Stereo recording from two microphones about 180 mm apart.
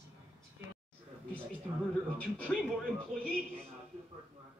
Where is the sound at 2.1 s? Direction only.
5° left (ahead or behind).